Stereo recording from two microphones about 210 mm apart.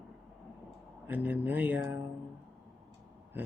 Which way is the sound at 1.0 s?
10° right (ahead or behind).